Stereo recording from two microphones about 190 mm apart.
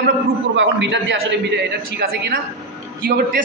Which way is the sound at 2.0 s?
60° right (ahead or behind).